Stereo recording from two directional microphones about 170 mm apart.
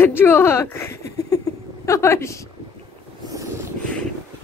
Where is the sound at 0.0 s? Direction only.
15° left (ahead or behind).